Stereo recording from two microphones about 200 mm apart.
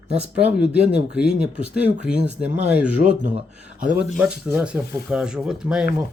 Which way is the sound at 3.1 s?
35° right (ahead or behind).